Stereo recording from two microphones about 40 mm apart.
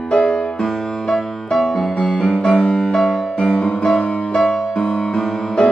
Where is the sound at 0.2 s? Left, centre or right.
Centre.